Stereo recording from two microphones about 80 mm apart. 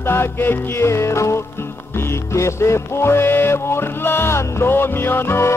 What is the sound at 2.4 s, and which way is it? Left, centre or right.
Music, left.